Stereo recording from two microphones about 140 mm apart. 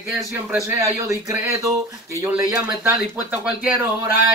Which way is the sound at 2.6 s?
10° right (ahead or behind).